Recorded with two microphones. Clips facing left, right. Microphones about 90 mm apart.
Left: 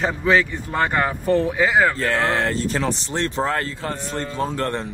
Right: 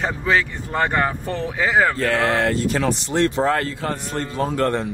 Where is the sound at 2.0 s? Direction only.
35° left (ahead or behind).